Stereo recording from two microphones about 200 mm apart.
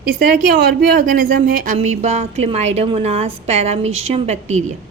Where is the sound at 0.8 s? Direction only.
45° right (ahead or behind).